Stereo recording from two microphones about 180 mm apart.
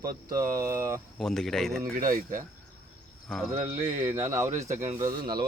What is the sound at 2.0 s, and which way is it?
Speech, 50° right (ahead or behind).